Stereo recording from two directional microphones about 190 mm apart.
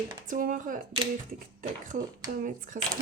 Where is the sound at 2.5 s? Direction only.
45° right (ahead or behind).